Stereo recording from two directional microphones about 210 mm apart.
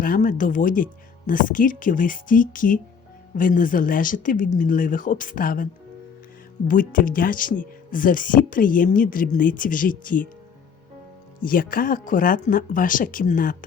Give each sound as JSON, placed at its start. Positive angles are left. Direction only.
{"t": 0.0, "sound": "speech", "side_deg": 40}
{"t": 6.7, "sound": "speech", "side_deg": 40}
{"t": 11.3, "sound": "speech", "side_deg": 40}